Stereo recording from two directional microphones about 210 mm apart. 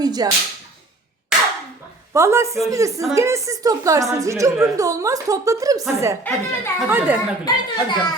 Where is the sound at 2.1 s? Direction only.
15° right (ahead or behind).